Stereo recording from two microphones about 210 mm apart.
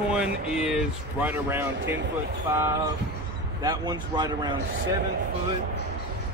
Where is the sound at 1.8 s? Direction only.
60° right (ahead or behind).